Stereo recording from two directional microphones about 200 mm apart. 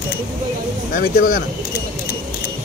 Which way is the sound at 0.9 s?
45° left (ahead or behind).